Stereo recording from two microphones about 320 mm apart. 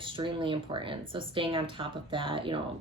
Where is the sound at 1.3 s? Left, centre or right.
Centre.